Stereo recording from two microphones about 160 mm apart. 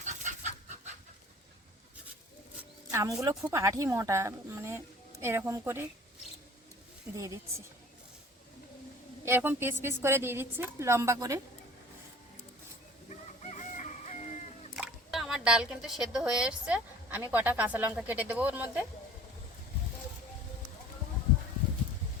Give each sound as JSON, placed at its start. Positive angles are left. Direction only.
{"t": 0.0, "sound": "chicken", "side_deg": -50}
{"t": 2.9, "sound": "a woman's voice", "side_deg": -20}
{"t": 9.2, "sound": "a woman's voice", "side_deg": -15}
{"t": 13.4, "sound": "chicken", "side_deg": 50}
{"t": 14.8, "sound": "speech", "side_deg": 0}